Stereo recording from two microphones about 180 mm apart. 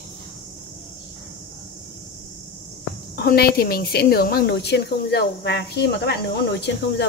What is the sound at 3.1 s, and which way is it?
A woman's voice, 60° left (ahead or behind).